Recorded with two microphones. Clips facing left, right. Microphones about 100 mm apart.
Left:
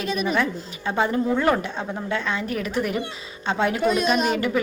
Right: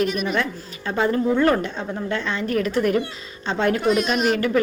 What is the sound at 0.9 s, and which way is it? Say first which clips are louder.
A woman's voice: right 2 dB; 15° left (ahead or behind).